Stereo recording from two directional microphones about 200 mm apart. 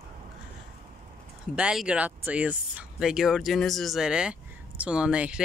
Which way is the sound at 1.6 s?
5° right (ahead or behind).